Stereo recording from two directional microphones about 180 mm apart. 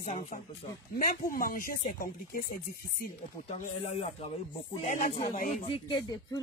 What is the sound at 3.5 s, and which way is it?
Speech, 35° left (ahead or behind).